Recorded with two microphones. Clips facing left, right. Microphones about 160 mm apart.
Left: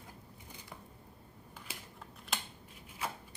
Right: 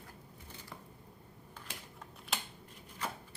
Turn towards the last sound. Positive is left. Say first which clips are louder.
# left 1 dB
turn(degrees=10)  # may be behind; listen again after turning